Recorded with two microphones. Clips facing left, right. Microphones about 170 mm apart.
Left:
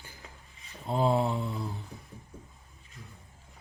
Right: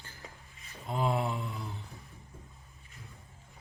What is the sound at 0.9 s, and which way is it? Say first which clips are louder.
Mantra: left 5 dB; 30° left (ahead or behind).